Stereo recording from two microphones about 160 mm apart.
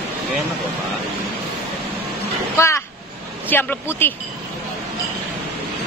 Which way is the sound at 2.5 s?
15° left (ahead or behind).